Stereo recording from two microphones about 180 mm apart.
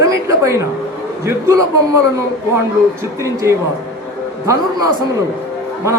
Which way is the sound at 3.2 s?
15° right (ahead or behind).